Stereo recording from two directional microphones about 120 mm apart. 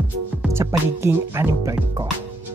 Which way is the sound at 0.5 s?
20° right (ahead or behind).